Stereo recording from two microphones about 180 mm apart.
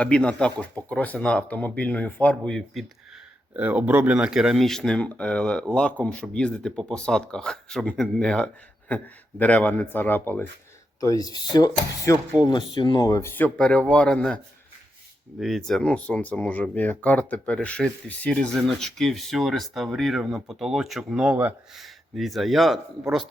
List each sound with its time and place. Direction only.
0.0 s speech: 5° left (ahead or behind)
3.5 s speech: 10° right (ahead or behind); by 12.1 s 20° left (ahead or behind)
12.1 s speech: 10° right (ahead or behind)
12.5 s speech: 25° left (ahead or behind); by 14.3 s 5° left (ahead or behind)
15.4 s speech: centre (ahead or behind)